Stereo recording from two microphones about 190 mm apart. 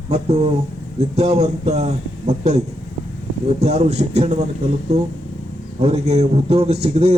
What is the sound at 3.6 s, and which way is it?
A man's voice, 35° right (ahead or behind).